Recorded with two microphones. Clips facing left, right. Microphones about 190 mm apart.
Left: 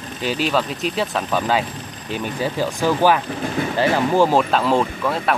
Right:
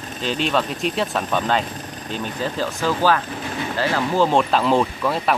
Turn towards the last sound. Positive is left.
turn(degrees=0)  # may be behind; listen again after turning